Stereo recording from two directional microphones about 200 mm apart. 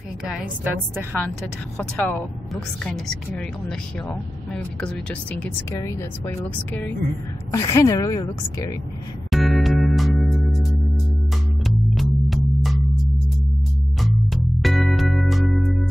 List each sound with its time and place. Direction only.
0.2 s a woman's voice: 5° right (ahead or behind)
1.8 s a woman's voice: 5° left (ahead or behind)
9.3 s music: centre (ahead or behind)
14.3 s music: centre (ahead or behind)